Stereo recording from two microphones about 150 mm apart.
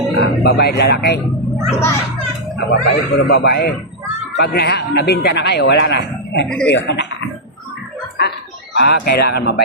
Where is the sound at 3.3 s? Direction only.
90° left.